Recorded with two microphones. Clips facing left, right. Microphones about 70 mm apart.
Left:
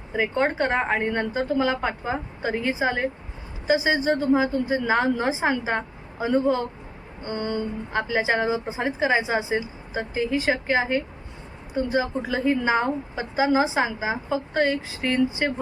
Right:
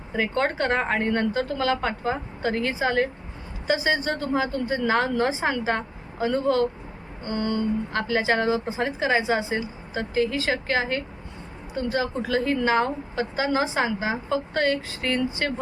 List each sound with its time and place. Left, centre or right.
0.1 s a woman's voice: centre